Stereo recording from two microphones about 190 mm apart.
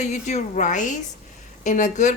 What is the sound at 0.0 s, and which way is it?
A woman's voice, 35° left (ahead or behind).